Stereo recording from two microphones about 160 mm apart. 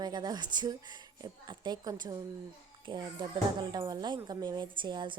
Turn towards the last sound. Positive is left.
turn(degrees=-30)  # may be behind; listen again after turning